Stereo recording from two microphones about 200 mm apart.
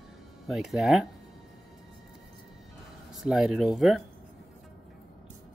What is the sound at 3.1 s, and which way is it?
Speech, centre (ahead or behind).